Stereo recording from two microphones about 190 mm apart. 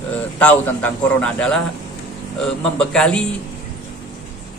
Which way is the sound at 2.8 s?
5° left (ahead or behind).